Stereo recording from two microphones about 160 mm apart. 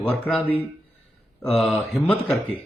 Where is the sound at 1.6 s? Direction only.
Centre (ahead or behind).